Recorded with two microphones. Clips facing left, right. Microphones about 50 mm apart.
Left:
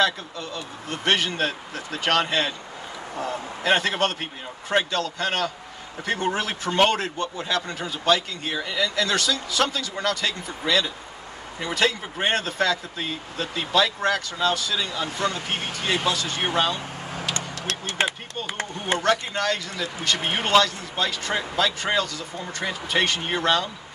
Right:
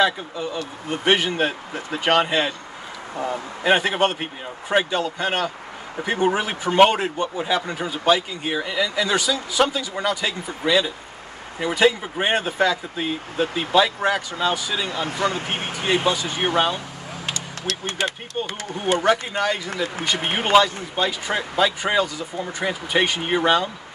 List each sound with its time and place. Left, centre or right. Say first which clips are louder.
0.0 s speech: right 3 dB; centre
3.6 s speech: right 3 dB; centre
18.0 s speech: left 1 dB; left
18.9 s speech: right 2 dB; centre